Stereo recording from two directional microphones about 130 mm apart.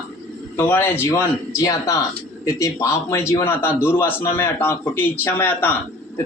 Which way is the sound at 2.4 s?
25° left (ahead or behind).